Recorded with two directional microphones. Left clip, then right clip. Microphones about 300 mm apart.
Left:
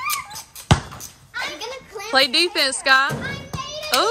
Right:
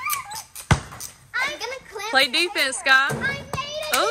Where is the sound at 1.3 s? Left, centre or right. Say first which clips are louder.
Right 3 dB; centre.